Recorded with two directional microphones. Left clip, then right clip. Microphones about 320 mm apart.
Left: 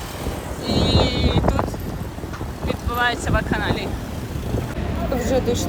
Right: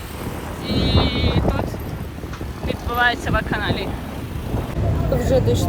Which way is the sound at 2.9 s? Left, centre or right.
Centre.